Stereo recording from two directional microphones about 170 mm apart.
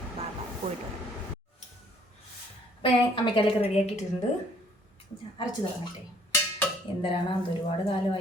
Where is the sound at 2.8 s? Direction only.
30° left (ahead or behind).